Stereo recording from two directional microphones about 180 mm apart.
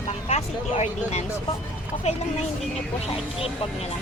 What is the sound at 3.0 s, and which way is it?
Speech, 35° left (ahead or behind).